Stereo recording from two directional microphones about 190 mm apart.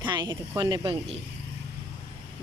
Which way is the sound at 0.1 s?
20° right (ahead or behind).